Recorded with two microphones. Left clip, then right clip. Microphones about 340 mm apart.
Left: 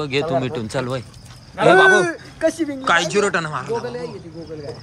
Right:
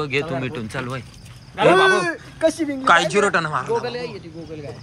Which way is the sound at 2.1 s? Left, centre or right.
Right.